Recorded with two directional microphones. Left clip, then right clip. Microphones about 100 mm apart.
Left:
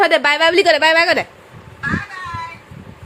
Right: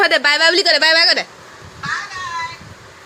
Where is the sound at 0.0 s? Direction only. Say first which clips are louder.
Left 1 dB; 20° left (ahead or behind).